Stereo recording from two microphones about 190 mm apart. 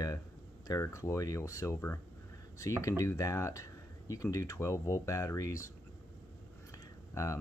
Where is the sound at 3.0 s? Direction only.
15° left (ahead or behind).